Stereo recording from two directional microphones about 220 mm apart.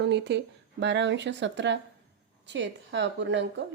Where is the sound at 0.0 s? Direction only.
50° right (ahead or behind).